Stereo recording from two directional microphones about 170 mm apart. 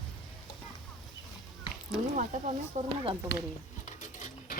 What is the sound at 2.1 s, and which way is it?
Speech, 45° right (ahead or behind).